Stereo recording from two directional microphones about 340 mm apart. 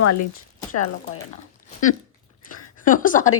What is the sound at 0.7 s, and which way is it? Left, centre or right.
Speech, left.